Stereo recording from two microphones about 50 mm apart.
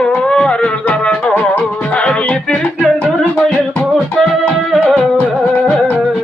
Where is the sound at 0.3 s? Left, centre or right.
Centre.